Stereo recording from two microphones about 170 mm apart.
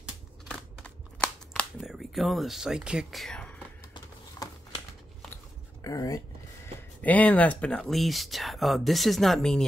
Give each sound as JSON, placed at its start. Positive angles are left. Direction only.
{"t": 0.5, "sound": "a sound", "side_deg": 5}
{"t": 5.9, "sound": "speech", "side_deg": 20}
{"t": 7.0, "sound": "speech", "side_deg": 10}